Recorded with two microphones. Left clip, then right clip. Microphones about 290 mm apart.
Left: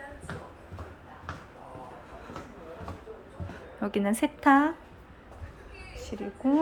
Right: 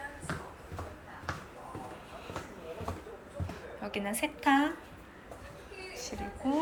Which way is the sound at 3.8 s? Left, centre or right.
Left.